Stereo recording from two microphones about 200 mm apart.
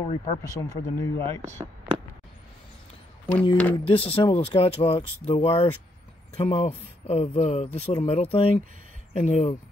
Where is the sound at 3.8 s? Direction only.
30° left (ahead or behind).